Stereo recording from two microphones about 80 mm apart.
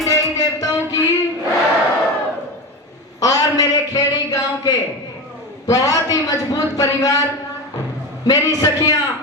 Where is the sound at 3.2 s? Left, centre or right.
Left.